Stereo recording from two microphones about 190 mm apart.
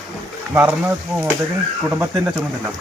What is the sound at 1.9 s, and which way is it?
Speech, 10° right (ahead or behind).